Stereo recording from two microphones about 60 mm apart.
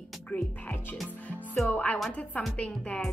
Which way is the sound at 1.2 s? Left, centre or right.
Left.